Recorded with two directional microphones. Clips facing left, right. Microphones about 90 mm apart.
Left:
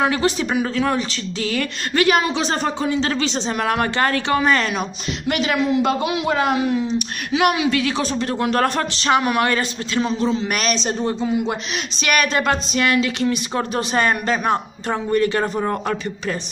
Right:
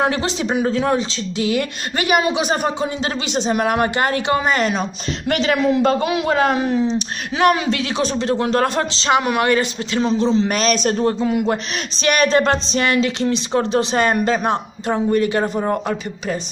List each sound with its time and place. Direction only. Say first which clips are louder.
0.2 s speech: even; 20° right (ahead or behind)
5.3 s a man's voice: right 2 dB; 40° right (ahead or behind)
8.0 s speech: right 2 dB; 25° right (ahead or behind)
10.7 s speech: right 4 dB; 50° right (ahead or behind)
12.0 s speech: right 4 dB; 30° right (ahead or behind)